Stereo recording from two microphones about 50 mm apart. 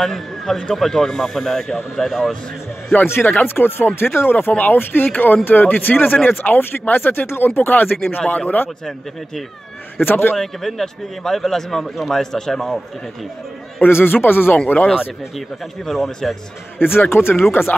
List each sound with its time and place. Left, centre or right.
0.0 s a man's voice: centre
3.1 s speech: left
10.0 s speech: left
10.3 s a man's voice: centre
13.7 s speech: left
15.3 s speech: centre
16.7 s speech: left